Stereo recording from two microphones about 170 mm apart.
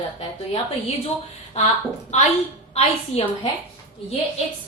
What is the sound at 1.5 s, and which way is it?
A woman's voice, 40° left (ahead or behind).